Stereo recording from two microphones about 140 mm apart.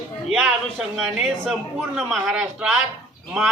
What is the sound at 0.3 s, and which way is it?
A man's voice, 5° right (ahead or behind).